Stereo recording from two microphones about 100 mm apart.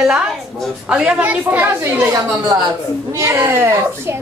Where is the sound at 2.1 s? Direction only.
35° right (ahead or behind).